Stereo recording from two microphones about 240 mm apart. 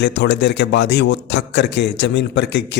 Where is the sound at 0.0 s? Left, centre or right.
Left.